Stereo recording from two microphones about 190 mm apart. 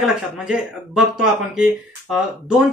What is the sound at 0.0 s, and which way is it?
Speech, 5° right (ahead or behind).